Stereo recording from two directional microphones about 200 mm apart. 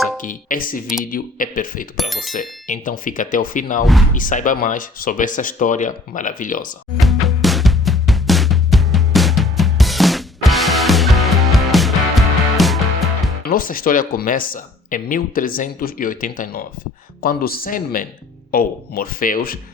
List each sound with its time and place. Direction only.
0.2 s speech: 40° left (ahead or behind)
2.0 s speech: centre (ahead or behind)
2.3 s speech: 40° left (ahead or behind)
7.0 s music: centre (ahead or behind)
13.4 s speech: 45° left (ahead or behind)